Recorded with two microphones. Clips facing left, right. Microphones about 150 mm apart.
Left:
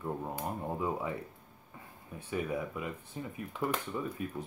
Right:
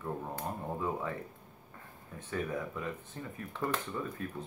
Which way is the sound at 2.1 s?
10° left (ahead or behind).